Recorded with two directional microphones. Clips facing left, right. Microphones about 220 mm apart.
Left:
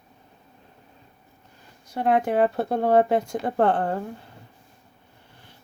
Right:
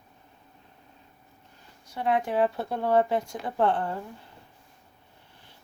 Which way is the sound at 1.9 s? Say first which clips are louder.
Left 5 dB; 50° left (ahead or behind).